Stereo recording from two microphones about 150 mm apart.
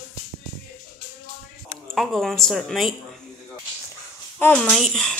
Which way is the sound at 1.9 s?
Centre (ahead or behind).